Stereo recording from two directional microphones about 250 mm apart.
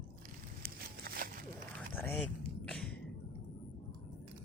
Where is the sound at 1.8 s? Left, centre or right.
Centre.